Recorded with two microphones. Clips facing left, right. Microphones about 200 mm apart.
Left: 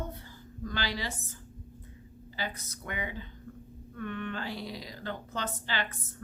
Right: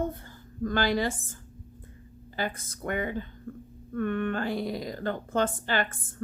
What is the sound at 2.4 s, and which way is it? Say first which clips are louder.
A woman's voice: right 6 dB; 50° right (ahead or behind).